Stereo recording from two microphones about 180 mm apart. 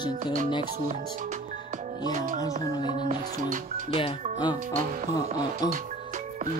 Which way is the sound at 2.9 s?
40° right (ahead or behind).